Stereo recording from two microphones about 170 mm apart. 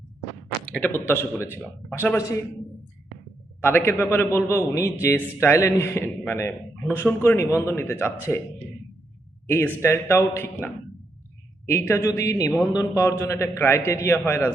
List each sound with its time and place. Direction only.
0.6 s a man's voice: 5° left (ahead or behind)
3.6 s a man's voice: 15° left (ahead or behind)
9.5 s a man's voice: 15° left (ahead or behind)